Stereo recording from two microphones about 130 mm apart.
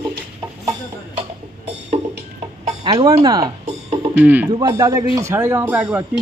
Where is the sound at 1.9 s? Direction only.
40° right (ahead or behind).